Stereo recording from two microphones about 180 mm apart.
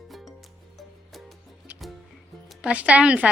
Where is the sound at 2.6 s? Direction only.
5° right (ahead or behind).